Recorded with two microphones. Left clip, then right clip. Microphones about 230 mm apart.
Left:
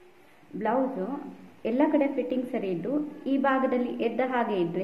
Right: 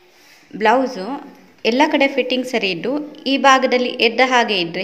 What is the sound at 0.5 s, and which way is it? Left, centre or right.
A woman's voice, right.